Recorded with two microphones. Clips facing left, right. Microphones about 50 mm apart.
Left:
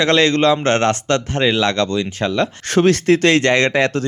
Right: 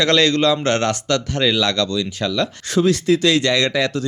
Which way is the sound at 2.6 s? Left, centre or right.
Left.